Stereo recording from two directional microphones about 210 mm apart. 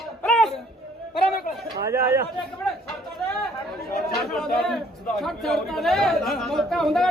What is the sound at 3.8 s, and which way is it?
Speech, 45° left (ahead or behind).